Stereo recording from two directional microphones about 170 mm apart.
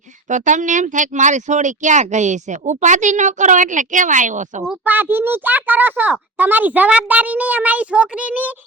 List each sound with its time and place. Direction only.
0.3 s speech: 45° right (ahead or behind)
4.7 s a child's voice: 10° right (ahead or behind)